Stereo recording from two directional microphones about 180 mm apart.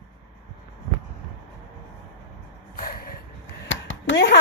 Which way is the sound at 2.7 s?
55° left (ahead or behind).